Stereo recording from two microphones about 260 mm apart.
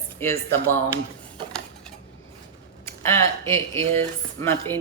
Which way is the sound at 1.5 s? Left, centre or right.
Centre.